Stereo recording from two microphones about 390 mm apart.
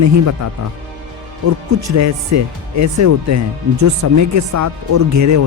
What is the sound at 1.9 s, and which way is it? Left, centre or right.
Speech, right.